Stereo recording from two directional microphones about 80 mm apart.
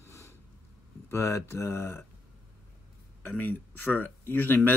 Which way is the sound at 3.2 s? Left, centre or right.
Left.